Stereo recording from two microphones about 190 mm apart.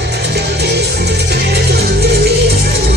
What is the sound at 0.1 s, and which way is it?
Music, 60° right (ahead or behind).